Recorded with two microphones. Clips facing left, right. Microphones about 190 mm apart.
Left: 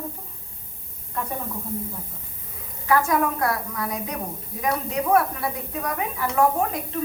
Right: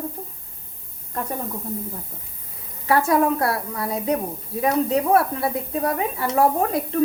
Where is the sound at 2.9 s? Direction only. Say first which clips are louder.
Right 3 dB; 30° right (ahead or behind).